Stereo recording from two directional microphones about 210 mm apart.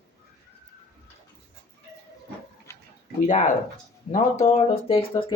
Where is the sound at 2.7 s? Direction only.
10° left (ahead or behind).